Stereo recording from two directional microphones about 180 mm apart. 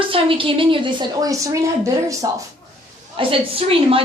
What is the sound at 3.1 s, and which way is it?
Speech, 30° right (ahead or behind).